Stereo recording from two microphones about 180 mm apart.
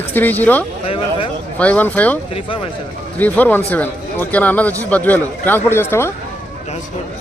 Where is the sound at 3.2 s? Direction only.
10° left (ahead or behind).